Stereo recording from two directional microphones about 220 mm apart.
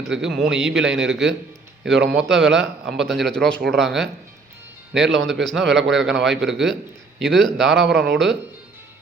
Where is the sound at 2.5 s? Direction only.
55° right (ahead or behind).